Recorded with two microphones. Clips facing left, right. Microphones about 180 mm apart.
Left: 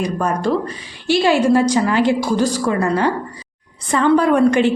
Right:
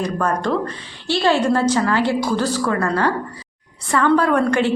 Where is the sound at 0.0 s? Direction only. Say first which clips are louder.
Left 2 dB; 10° left (ahead or behind).